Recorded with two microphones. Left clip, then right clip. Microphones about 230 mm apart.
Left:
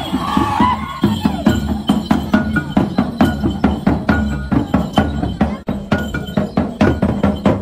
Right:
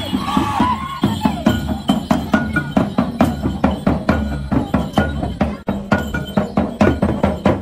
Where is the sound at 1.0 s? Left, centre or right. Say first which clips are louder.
Left 1 dB; right.